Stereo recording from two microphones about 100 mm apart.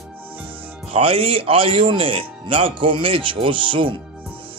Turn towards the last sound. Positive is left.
turn(degrees=-60)  # may be behind; listen again after turning